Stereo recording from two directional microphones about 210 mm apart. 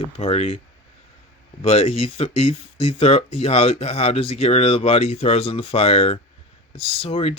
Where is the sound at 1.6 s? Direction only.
30° left (ahead or behind).